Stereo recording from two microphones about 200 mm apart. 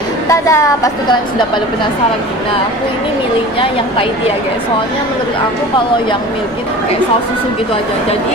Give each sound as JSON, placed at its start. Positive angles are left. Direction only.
{"t": 0.3, "sound": "a woman's voice", "side_deg": 15}